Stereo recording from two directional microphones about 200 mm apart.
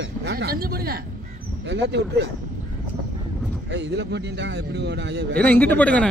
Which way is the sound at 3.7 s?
60° right (ahead or behind).